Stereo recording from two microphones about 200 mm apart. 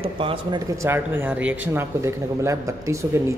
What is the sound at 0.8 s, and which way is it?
Speech, 10° right (ahead or behind).